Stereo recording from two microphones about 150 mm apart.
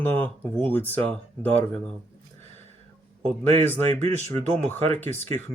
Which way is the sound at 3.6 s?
15° left (ahead or behind).